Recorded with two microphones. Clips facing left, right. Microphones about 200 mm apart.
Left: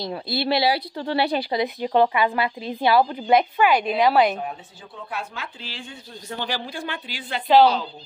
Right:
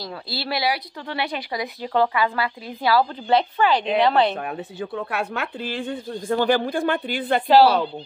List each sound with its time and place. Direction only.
0.0 s a woman's voice: 20° left (ahead or behind)
4.4 s speech: 70° right (ahead or behind)